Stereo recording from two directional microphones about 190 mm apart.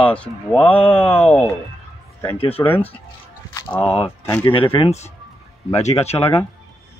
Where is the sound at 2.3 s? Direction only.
30° left (ahead or behind).